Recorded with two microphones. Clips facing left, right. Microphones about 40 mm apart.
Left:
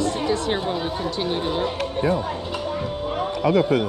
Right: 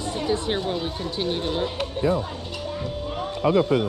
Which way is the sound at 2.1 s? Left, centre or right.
Left.